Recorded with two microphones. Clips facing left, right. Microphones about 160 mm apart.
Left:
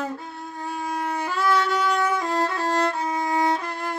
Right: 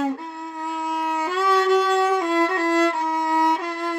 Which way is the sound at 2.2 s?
70° right (ahead or behind).